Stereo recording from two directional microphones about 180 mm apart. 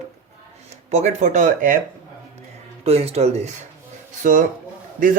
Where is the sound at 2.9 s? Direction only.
35° right (ahead or behind).